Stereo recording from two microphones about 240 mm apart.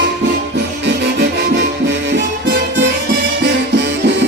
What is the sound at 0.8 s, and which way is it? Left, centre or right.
Music, right.